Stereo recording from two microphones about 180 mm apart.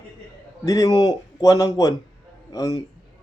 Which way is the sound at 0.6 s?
20° left (ahead or behind).